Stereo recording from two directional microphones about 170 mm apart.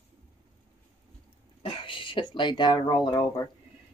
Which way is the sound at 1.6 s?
30° left (ahead or behind).